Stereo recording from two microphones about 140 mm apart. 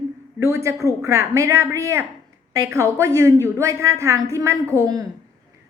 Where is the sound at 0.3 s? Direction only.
20° right (ahead or behind).